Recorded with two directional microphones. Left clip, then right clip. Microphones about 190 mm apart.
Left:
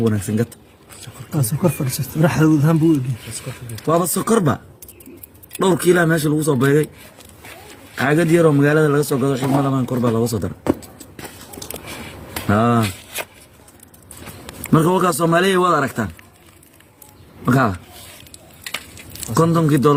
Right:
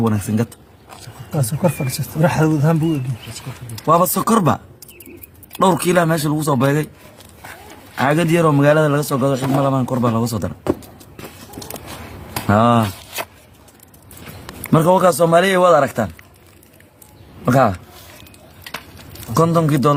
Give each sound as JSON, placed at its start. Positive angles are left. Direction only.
{"t": 1.8, "sound": "speech", "side_deg": 5}
{"t": 3.8, "sound": "a man's voice", "side_deg": -40}
{"t": 7.9, "sound": "a man's voice", "side_deg": -40}
{"t": 12.5, "sound": "speech", "side_deg": -40}
{"t": 14.7, "sound": "speech", "side_deg": -35}
{"t": 17.4, "sound": "speech", "side_deg": -40}
{"t": 19.3, "sound": "speech", "side_deg": -35}